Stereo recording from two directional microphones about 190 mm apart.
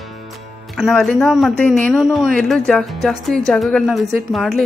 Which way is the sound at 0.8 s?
Centre (ahead or behind).